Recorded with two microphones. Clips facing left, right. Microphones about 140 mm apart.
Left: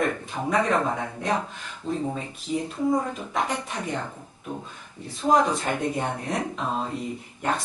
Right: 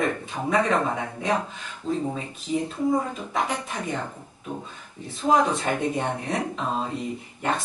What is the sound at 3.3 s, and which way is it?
Speech, 5° right (ahead or behind).